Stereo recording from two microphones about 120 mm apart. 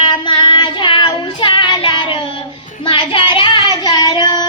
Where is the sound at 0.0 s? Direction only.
40° left (ahead or behind).